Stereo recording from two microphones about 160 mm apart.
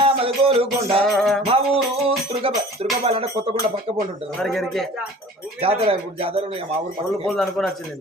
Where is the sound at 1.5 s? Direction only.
35° right (ahead or behind).